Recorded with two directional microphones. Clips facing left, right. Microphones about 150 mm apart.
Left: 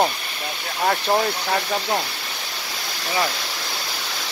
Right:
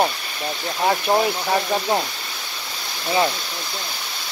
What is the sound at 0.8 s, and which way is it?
Speech, 10° right (ahead or behind).